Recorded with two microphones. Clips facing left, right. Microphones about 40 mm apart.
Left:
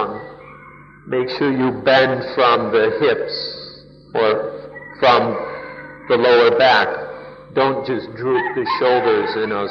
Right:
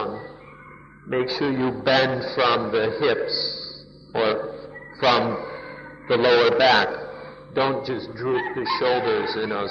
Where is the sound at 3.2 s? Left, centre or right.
Centre.